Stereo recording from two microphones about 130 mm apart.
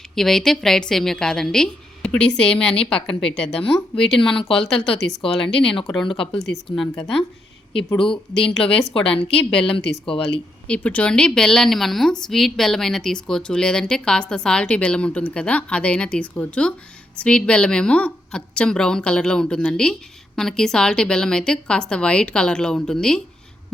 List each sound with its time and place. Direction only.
0.2 s a woman's voice: 5° left (ahead or behind)
4.2 s speech: 45° left (ahead or behind)
4.4 s a woman's voice: 5° left (ahead or behind)
5.2 s speech: 45° left (ahead or behind)
6.4 s a woman's voice: centre (ahead or behind)
8.6 s speech: 45° left (ahead or behind)
9.0 s a woman's voice: 5° left (ahead or behind)
9.3 s speech: 45° left (ahead or behind)
10.7 s a woman's voice: 10° left (ahead or behind)